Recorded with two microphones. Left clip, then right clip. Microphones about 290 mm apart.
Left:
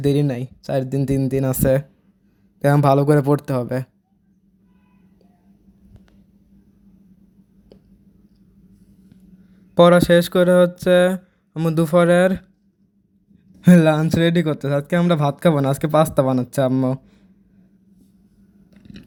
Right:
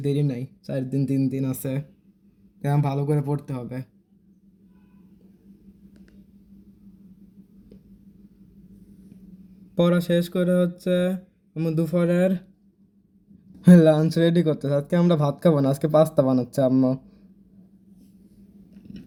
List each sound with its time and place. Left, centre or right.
0.0 s speech: left
10.3 s speech: left
12.1 s speech: left
13.7 s speech: left